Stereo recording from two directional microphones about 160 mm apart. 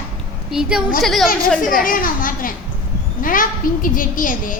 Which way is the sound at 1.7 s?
60° left (ahead or behind).